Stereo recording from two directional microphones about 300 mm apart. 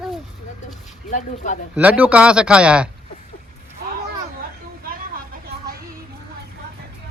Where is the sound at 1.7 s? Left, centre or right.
Centre.